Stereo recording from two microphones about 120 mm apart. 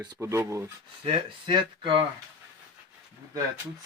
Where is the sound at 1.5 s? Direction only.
45° right (ahead or behind).